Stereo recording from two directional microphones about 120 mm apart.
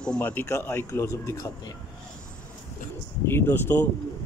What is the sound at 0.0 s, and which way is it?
Speech, 10° left (ahead or behind).